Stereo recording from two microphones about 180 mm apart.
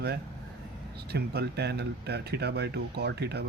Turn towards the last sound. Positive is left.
turn(degrees=-65)  # may be behind; listen again after turning